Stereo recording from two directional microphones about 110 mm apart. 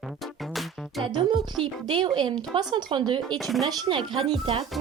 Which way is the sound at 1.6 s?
45° right (ahead or behind).